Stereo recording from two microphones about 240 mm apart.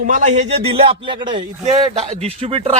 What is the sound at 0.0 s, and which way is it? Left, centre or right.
A man's voice, right.